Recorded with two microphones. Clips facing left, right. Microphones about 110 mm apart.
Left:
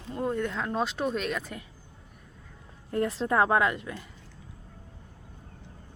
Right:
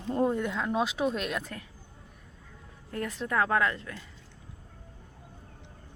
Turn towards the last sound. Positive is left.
turn(degrees=20)  # may be behind; listen again after turning